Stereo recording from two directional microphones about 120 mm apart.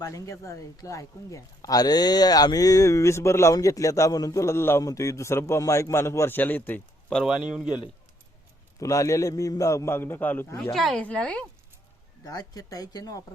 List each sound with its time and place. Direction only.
0.0 s a man's voice: 25° left (ahead or behind)
7.2 s speech: 5° right (ahead or behind)
8.8 s a man's voice: 25° left (ahead or behind)
10.6 s speech: 5° left (ahead or behind)
12.2 s speech: 35° left (ahead or behind)